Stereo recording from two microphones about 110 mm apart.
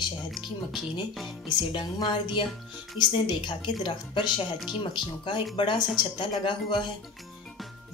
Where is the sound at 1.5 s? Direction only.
40° left (ahead or behind).